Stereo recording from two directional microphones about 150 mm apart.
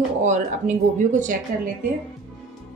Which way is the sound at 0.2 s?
55° right (ahead or behind).